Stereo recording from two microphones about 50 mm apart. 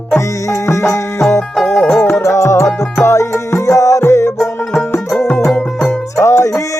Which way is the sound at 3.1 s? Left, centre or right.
Left.